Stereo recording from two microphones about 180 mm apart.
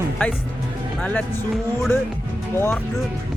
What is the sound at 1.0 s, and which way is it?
Speech, 5° left (ahead or behind).